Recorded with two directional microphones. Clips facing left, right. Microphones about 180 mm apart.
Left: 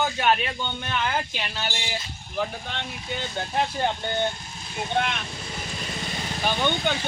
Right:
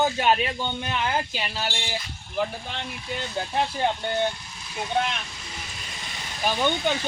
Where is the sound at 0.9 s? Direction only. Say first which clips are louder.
Left 1 dB; 30° right (ahead or behind).